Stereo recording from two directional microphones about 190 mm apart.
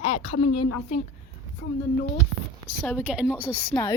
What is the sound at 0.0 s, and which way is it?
A woman's voice, 30° left (ahead or behind).